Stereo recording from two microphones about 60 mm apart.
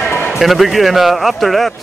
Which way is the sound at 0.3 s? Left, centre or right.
Centre.